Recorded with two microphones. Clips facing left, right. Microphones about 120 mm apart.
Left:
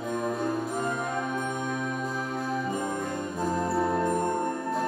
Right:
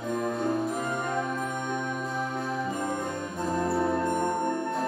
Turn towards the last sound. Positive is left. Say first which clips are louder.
# even
turn(degrees=0)  # may be behind; listen again after turning